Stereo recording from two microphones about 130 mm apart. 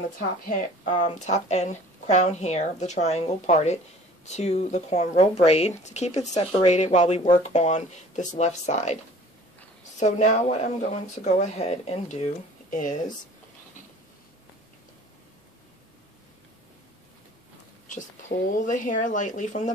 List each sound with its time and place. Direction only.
0.5 s speech: 75° left (ahead or behind)
9.9 s speech: 65° left (ahead or behind)
12.6 s speech: 80° left
18.7 s speech: 80° left